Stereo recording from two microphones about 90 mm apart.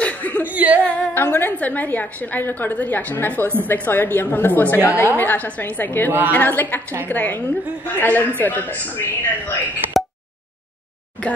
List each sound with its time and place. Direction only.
0.0 s a sound: 15° left (ahead or behind)
0.5 s singing: 20° right (ahead or behind)
0.8 s a woman's voice: 20° left (ahead or behind)